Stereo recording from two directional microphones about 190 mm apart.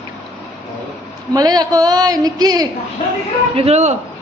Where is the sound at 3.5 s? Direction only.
35° right (ahead or behind).